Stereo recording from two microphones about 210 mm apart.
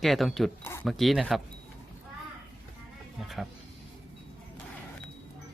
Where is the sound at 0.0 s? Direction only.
Centre (ahead or behind).